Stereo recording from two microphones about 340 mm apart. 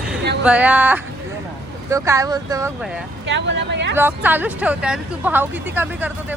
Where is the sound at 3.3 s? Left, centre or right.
Right.